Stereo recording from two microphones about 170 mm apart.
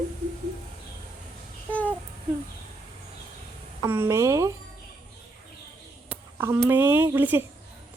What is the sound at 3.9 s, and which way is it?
Speech, 15° right (ahead or behind).